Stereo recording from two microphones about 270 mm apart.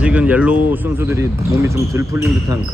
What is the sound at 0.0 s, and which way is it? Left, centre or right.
Speech, centre.